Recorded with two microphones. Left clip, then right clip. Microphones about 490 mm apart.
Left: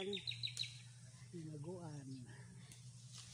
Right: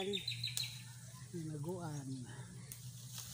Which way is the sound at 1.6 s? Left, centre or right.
Left.